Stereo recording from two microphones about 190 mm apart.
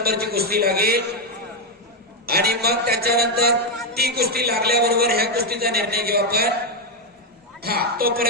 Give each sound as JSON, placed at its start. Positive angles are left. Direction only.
{"t": 0.0, "sound": "a man's voice", "side_deg": -55}
{"t": 2.2, "sound": "a man's voice", "side_deg": -55}
{"t": 7.6, "sound": "a woman's voice", "side_deg": -55}